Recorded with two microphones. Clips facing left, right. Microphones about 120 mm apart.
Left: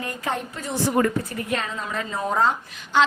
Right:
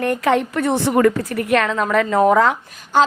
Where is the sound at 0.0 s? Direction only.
75° right (ahead or behind).